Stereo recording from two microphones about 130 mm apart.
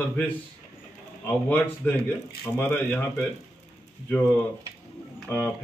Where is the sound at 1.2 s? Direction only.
15° left (ahead or behind).